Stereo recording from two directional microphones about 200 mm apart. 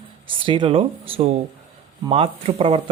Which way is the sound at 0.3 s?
25° right (ahead or behind).